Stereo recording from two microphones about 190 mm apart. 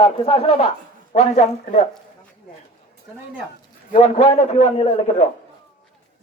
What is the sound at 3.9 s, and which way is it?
A man's voice, 35° left (ahead or behind).